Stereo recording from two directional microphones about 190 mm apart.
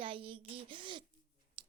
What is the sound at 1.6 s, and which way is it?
Tick-tock, 30° right (ahead or behind).